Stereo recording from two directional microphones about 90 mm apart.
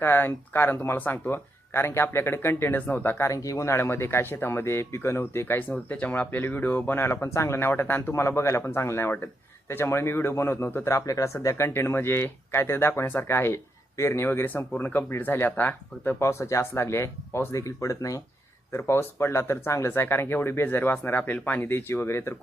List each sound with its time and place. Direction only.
0.0 s speech: 25° left (ahead or behind)
3.2 s speech: 40° left (ahead or behind); by 16.2 s 20° left (ahead or behind)
16.2 s speech: 35° left (ahead or behind)